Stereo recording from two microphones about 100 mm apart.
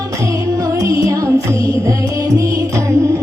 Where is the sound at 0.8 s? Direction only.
35° right (ahead or behind).